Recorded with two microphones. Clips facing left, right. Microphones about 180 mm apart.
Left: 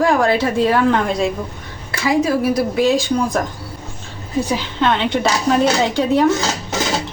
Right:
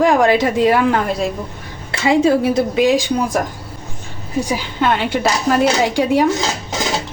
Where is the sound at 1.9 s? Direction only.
25° right (ahead or behind).